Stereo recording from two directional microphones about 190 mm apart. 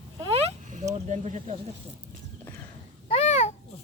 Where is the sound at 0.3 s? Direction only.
40° right (ahead or behind).